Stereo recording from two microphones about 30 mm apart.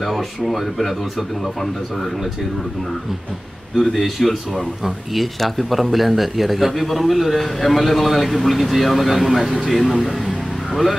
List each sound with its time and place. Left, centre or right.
0.1 s speech: centre
3.7 s speech: centre